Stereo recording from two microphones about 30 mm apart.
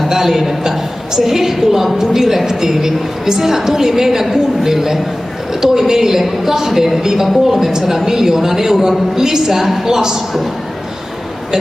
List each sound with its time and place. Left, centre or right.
0.1 s a woman's voice: centre